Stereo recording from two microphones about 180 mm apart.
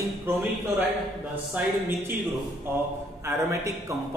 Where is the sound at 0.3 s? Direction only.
5° right (ahead or behind).